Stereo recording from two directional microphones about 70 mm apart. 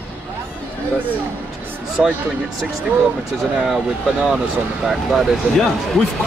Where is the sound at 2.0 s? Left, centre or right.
Centre.